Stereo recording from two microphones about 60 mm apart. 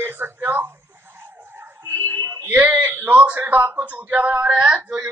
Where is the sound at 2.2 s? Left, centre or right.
Right.